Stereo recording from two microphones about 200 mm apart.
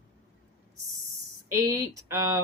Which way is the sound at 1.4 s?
15° right (ahead or behind).